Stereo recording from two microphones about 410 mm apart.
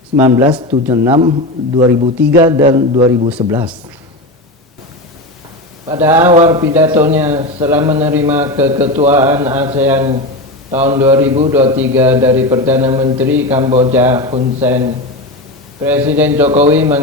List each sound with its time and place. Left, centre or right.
0.2 s a man's voice: centre
5.9 s a man's voice: centre
16.5 s a man's voice: centre
16.7 s speech: centre